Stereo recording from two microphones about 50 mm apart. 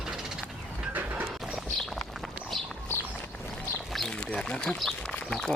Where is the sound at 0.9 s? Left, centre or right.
Right.